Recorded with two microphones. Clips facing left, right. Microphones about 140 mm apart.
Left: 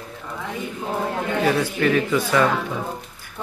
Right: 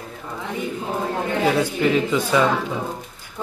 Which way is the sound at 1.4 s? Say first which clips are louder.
Right 1 dB; 20° right (ahead or behind).